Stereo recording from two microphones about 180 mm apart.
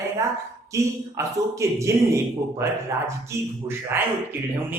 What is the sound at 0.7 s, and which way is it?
A man's voice, 15° right (ahead or behind).